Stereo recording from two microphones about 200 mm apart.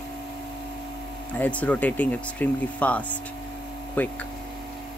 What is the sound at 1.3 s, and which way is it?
Speech, 5° left (ahead or behind).